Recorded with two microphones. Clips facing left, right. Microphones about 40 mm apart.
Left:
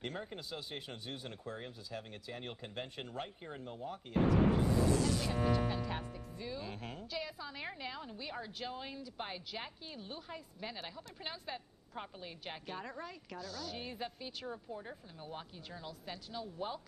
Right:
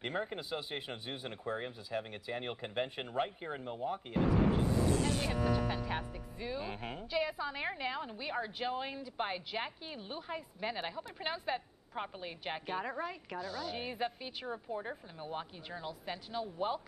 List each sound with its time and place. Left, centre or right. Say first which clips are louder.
0.0 s a woman's voice: right 5 dB; right
5.0 s speech: right 1 dB; right
5.9 s a woman's voice: right 3 dB; right